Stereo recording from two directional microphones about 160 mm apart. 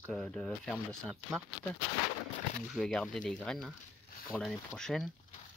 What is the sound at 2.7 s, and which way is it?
Speech, centre (ahead or behind).